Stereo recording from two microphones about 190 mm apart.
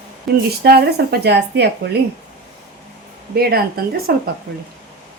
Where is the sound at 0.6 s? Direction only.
55° right (ahead or behind).